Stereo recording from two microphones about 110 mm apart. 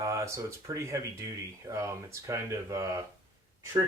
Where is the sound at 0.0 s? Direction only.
25° right (ahead or behind).